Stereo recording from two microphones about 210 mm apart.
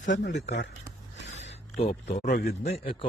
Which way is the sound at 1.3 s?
60° left (ahead or behind).